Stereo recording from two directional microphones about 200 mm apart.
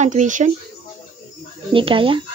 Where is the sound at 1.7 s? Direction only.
25° right (ahead or behind).